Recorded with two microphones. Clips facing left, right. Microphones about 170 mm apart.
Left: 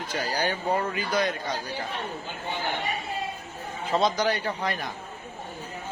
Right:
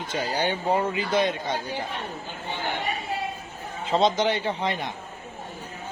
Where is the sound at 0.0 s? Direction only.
25° right (ahead or behind).